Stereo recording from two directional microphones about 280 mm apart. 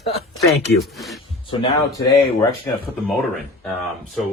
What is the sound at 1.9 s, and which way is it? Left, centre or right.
Speech, centre.